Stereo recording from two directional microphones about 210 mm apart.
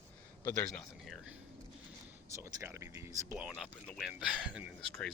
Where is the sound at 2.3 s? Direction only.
15° right (ahead or behind).